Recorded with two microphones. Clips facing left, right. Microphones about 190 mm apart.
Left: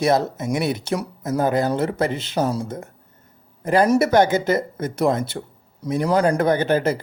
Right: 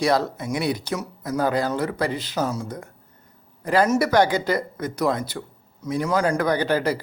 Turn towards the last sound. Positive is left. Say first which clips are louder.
# left 3 dB
turn(degrees=25)  # may be behind; listen again after turning